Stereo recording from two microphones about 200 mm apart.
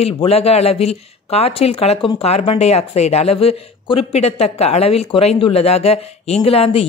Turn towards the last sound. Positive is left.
turn(degrees=30)  # may be behind; listen again after turning